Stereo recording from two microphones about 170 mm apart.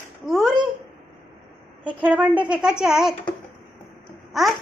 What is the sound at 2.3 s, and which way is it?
Speech, 25° right (ahead or behind).